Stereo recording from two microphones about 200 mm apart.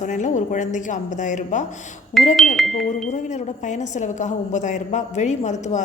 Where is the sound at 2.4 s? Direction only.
Centre (ahead or behind).